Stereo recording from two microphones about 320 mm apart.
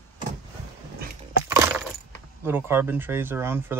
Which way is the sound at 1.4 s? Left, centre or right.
Centre.